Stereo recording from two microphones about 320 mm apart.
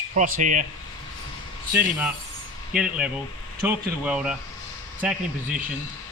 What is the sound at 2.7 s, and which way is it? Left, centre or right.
Speech, centre.